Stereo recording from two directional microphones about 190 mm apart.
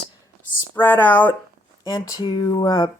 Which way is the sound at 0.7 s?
10° left (ahead or behind).